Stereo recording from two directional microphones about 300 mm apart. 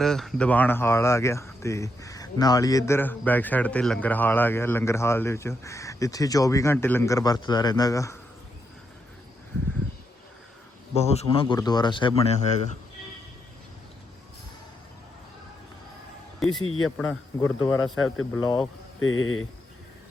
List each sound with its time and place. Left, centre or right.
0.0 s speech: centre
10.9 s speech: left
16.4 s speech: centre
16.6 s speech: left
17.0 s speech: centre
17.9 s speech: left